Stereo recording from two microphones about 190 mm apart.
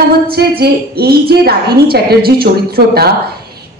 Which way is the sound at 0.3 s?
55° right (ahead or behind).